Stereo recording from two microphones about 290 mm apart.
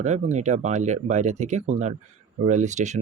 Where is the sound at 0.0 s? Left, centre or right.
Right.